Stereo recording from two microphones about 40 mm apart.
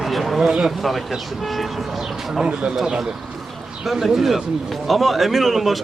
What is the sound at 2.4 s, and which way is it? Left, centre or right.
Speech, right.